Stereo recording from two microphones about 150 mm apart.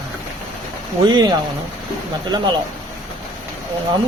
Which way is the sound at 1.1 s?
30° right (ahead or behind).